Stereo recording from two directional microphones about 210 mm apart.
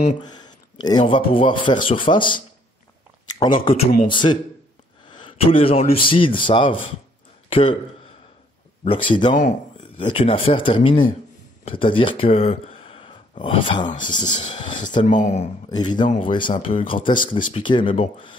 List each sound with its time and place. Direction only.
0.2 s a man's voice: 20° left (ahead or behind)
7.4 s a sound: 25° left (ahead or behind)
8.8 s speech: 25° left (ahead or behind)
9.4 s a sound: 35° left (ahead or behind)
9.9 s speech: 25° left (ahead or behind)
15.0 s speech: 35° left (ahead or behind)
15.7 s speech: 20° left (ahead or behind)